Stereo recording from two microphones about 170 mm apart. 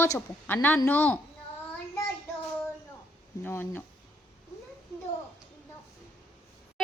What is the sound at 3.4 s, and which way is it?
Speech, 10° left (ahead or behind).